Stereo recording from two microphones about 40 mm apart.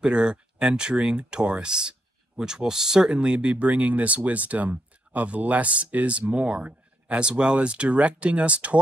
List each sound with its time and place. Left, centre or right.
0.0 s speech: right
3.3 s speech: right